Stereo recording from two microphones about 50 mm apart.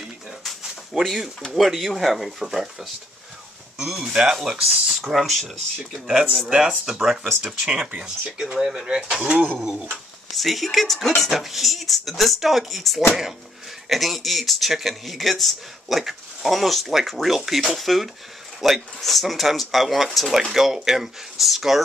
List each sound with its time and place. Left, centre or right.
0.4 s a sound: centre
1.4 s speech: centre
6.9 s speech: centre
9.2 s speech: right
9.6 s speech: centre
10.3 s speech: centre